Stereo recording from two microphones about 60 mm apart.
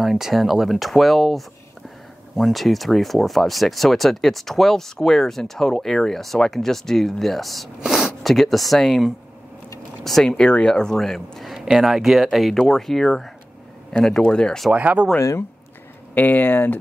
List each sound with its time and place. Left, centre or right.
0.0 s speech: centre
14.7 s speech: right
15.1 s speech: left
16.2 s speech: left